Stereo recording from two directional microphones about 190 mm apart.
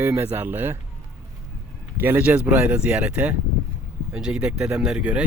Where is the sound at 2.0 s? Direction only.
10° right (ahead or behind).